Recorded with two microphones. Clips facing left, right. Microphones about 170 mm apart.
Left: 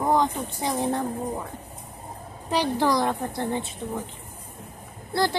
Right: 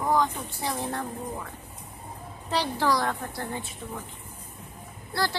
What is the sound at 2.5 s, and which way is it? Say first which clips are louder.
A woman's voice: left 3 dB; 15° left (ahead or behind).